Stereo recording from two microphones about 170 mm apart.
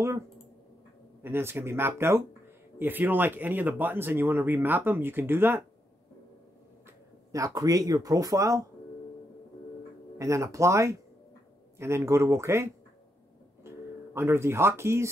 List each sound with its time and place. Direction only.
1.2 s speech: 15° right (ahead or behind)
7.3 s speech: 20° right (ahead or behind)
10.1 s speech: 20° right (ahead or behind)
13.7 s speech: 15° right (ahead or behind)